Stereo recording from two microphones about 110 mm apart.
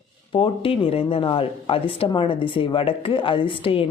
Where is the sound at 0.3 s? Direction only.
55° left (ahead or behind).